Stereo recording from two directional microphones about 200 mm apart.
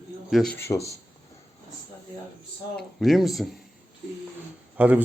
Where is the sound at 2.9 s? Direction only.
Centre (ahead or behind).